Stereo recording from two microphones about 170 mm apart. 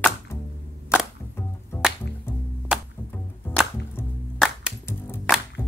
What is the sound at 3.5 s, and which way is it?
Music, 10° left (ahead or behind).